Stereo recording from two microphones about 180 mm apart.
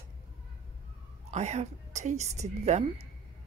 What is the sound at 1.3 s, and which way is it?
A woman's voice, 40° right (ahead or behind).